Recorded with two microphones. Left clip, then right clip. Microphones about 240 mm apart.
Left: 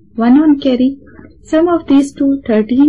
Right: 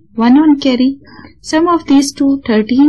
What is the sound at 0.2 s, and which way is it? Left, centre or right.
A woman's voice, right.